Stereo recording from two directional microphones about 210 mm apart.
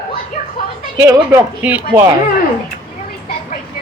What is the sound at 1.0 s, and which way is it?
Speech, 15° right (ahead or behind).